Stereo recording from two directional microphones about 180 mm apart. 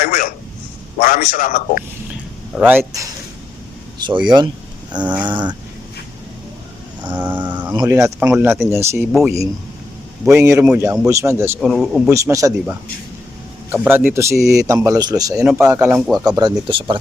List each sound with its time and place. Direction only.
0.0 s a sound: 50° left (ahead or behind)
0.9 s a man's voice: 50° left (ahead or behind)
2.6 s a man's voice: 10° right (ahead or behind)
3.9 s speech: 25° right (ahead or behind)
7.1 s a man's voice: 10° right (ahead or behind)
10.2 s a man's voice: 15° right (ahead or behind)
11.6 s speech: centre (ahead or behind)
12.0 s a man's voice: 15° right (ahead or behind)
13.8 s a man's voice: 10° right (ahead or behind); by 17.0 s 30° right (ahead or behind)